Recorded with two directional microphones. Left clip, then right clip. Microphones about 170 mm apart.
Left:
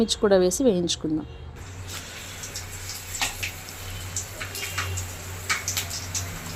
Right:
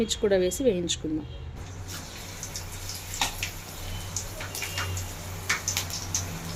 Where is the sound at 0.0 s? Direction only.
35° left (ahead or behind).